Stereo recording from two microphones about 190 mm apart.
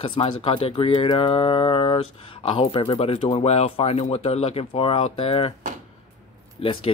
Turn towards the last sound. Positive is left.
turn(degrees=30)  # may be behind; listen again after turning